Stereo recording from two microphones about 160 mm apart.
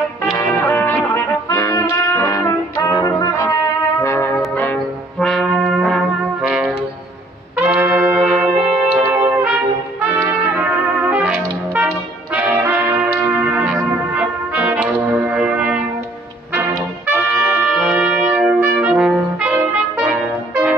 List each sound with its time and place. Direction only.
0.3 s music: 15° left (ahead or behind)
4.0 s brass instrument: 20° left (ahead or behind); by 6.7 s 5° right (ahead or behind)
7.5 s trumpet: 10° right (ahead or behind)
11.0 s brass instrument: 10° right (ahead or behind)
17.1 s trumpet: 10° right (ahead or behind)